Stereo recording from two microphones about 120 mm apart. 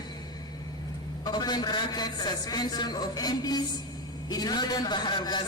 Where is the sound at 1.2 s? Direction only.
35° left (ahead or behind).